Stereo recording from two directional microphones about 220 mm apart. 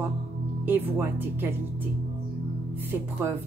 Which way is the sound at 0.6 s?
10° right (ahead or behind).